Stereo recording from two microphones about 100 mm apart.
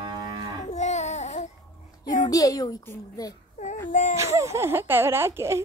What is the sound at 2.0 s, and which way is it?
Speech, 40° left (ahead or behind).